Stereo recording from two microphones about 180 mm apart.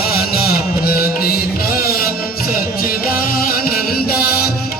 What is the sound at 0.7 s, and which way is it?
Music, 55° left (ahead or behind).